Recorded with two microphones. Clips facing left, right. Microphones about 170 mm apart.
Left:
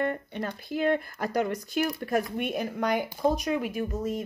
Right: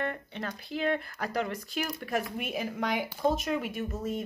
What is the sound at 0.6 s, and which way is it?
Speech, 45° left (ahead or behind).